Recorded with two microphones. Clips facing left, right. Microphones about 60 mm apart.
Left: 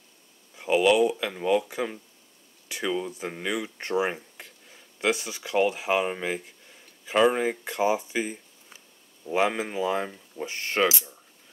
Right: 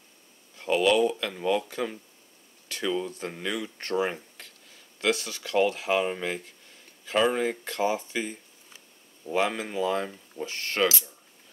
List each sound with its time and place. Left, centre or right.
0.6 s speech: centre